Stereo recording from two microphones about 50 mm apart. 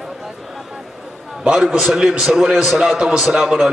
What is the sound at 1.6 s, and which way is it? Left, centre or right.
A man's voice, centre.